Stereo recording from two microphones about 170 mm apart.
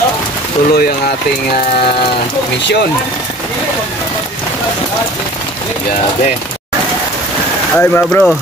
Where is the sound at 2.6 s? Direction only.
85° left.